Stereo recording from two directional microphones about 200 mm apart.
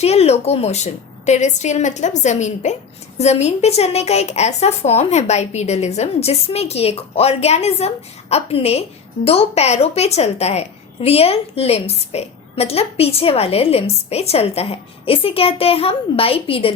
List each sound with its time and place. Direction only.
0.0 s a woman's voice: 30° left (ahead or behind)